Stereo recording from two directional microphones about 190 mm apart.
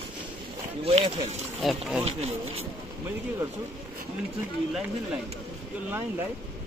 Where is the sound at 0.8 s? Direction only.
35° right (ahead or behind).